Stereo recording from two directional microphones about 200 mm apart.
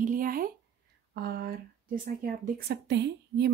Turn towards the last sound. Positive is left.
turn(degrees=-55)  # may be behind; listen again after turning